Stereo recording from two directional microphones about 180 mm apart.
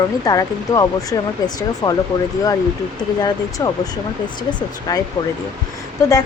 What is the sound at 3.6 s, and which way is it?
Speech, 20° left (ahead or behind).